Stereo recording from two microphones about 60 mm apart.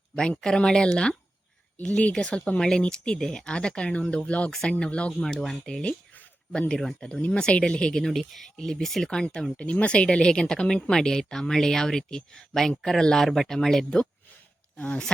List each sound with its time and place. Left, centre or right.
0.2 s a woman's voice: centre
5.2 s a woman's voice: centre
14.8 s speech: centre